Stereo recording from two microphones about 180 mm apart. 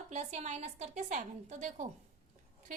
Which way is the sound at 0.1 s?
40° right (ahead or behind).